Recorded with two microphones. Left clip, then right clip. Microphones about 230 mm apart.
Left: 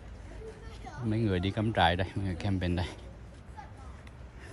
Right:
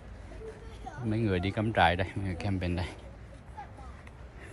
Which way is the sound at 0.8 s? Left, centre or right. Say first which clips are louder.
Even; centre.